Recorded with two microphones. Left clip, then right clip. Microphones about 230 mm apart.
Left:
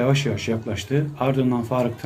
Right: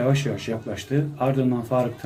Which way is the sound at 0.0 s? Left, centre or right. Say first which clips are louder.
Left 2 dB; centre.